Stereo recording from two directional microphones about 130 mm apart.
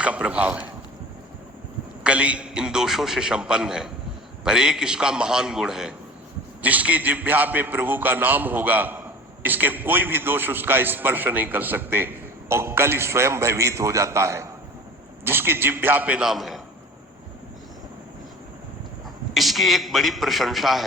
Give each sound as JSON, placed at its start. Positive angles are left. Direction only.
{"t": 0.0, "sound": "a man's voice", "side_deg": -10}
{"t": 2.0, "sound": "a man's voice", "side_deg": -10}
{"t": 19.3, "sound": "a man's voice", "side_deg": 0}